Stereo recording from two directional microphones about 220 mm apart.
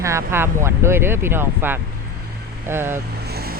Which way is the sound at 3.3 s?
45° right (ahead or behind).